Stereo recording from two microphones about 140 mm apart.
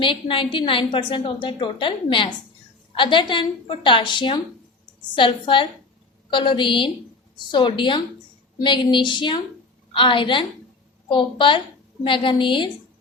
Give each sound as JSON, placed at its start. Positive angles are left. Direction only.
{"t": 0.0, "sound": "a woman's voice", "side_deg": 40}